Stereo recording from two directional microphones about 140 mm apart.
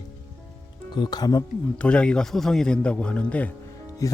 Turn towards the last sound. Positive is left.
turn(degrees=25)  # may be behind; listen again after turning